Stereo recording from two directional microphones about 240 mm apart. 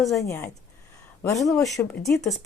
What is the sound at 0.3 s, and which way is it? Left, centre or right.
Speech, centre.